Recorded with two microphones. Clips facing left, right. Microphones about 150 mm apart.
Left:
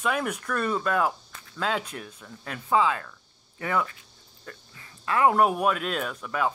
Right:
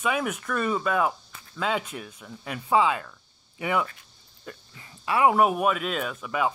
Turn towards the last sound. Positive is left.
turn(degrees=-5)  # may be behind; listen again after turning